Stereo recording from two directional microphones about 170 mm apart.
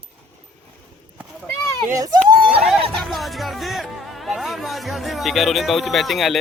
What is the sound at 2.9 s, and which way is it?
Speech, centre (ahead or behind).